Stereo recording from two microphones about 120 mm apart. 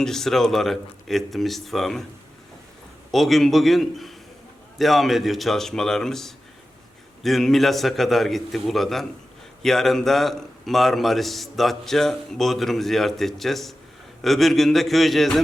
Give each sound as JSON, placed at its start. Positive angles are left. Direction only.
{"t": 0.0, "sound": "a man's voice", "side_deg": 5}
{"t": 3.1, "sound": "a man's voice", "side_deg": 0}